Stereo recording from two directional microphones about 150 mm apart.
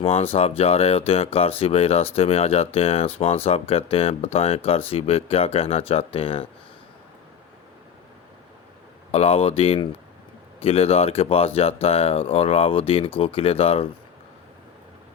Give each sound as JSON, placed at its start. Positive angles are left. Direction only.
{"t": 0.0, "sound": "speech", "side_deg": 40}
{"t": 9.1, "sound": "speech", "side_deg": 40}